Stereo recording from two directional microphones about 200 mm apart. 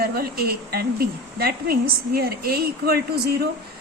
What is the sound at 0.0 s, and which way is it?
A woman's voice, 50° right (ahead or behind).